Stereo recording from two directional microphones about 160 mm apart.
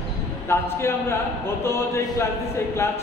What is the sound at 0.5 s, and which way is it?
A man's voice, 15° left (ahead or behind).